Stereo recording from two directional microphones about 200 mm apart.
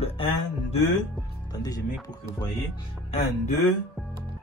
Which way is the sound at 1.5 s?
20° left (ahead or behind).